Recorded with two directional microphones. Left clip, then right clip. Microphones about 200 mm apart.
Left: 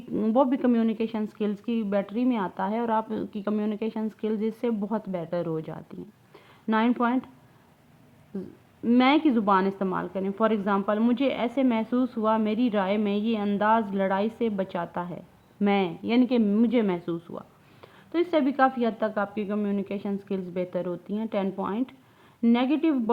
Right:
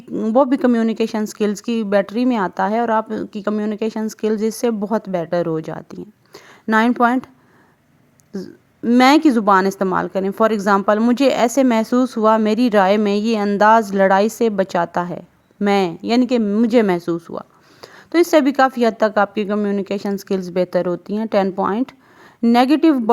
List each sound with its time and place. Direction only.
0.1 s a sound: 20° right (ahead or behind)
0.3 s speech: 35° right (ahead or behind)
8.3 s speech: 35° right (ahead or behind)
16.6 s speech: 40° right (ahead or behind)